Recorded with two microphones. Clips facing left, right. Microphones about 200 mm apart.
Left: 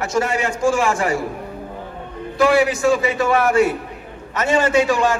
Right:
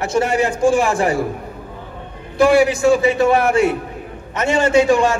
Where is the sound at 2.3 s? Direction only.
30° right (ahead or behind).